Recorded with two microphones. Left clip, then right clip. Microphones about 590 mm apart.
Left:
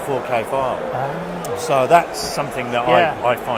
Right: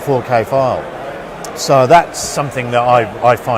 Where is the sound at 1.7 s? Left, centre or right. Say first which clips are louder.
Right 6 dB; right.